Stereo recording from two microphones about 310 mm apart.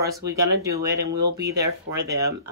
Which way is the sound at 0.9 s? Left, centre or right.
Right.